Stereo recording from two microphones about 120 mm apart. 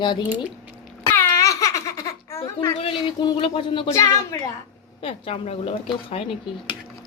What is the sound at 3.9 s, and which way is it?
Speech, 25° left (ahead or behind).